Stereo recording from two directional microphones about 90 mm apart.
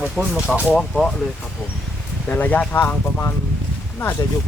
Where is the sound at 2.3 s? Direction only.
20° left (ahead or behind).